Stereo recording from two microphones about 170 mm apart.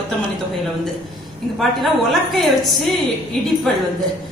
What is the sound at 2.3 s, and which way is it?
Speech, centre (ahead or behind).